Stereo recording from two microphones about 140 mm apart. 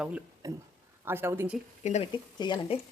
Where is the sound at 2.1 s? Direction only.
30° left (ahead or behind).